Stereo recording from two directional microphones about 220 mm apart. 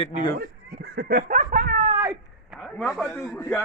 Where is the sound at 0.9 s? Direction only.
45° right (ahead or behind).